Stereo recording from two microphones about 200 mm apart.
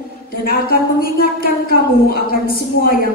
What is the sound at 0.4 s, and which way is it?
A man's voice, 50° left (ahead or behind).